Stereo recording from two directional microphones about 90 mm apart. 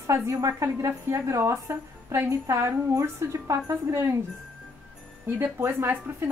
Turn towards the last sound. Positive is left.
turn(degrees=-25)  # may be behind; listen again after turning